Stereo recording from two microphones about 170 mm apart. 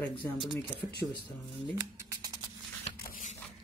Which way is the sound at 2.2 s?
25° right (ahead or behind).